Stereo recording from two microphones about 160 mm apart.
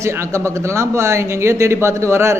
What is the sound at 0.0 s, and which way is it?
A man's voice, 15° right (ahead or behind).